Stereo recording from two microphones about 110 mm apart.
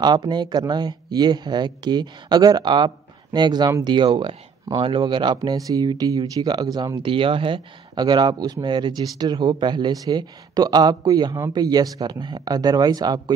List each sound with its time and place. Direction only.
0.0 s speech: 40° right (ahead or behind)
7.0 s speech: 50° right (ahead or behind); by 13.2 s 35° right (ahead or behind)